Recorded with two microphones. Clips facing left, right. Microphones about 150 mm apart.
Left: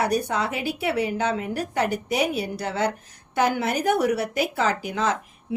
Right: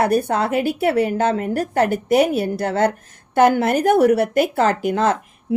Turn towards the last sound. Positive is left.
turn(degrees=-50)  # may be behind; listen again after turning